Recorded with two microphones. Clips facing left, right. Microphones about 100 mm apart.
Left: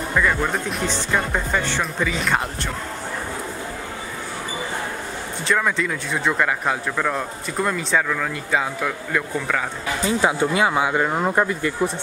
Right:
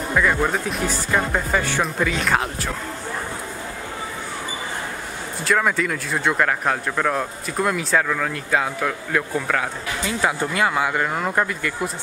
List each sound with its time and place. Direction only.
0.1 s speech: 5° right (ahead or behind)
5.4 s speech: 5° right (ahead or behind)
10.0 s speech: 20° left (ahead or behind)